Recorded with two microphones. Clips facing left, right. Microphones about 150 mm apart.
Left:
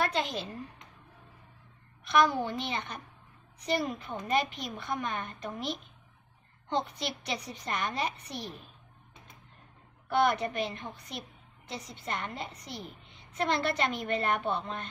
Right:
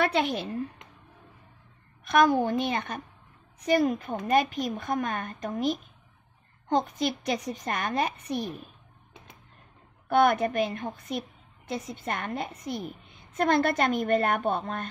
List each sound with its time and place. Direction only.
0.0 s a woman's voice: 65° right (ahead or behind)
2.0 s a woman's voice: 50° right (ahead or behind)
10.0 s a woman's voice: 50° right (ahead or behind)